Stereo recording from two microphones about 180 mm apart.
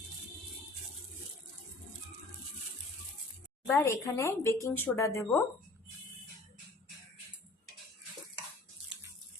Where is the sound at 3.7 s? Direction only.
15° left (ahead or behind).